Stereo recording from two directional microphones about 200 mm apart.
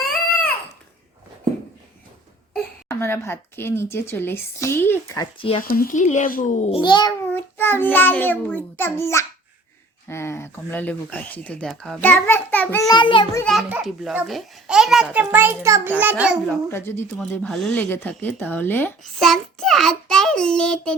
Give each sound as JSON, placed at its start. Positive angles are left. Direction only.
{"t": 2.9, "sound": "speech", "side_deg": 10}
{"t": 5.6, "sound": "a child's voice", "side_deg": 45}
{"t": 7.3, "sound": "speech", "side_deg": 10}
{"t": 12.9, "sound": "a child's voice", "side_deg": 25}
{"t": 13.4, "sound": "a child's voice", "side_deg": 0}
{"t": 16.6, "sound": "speech", "side_deg": 10}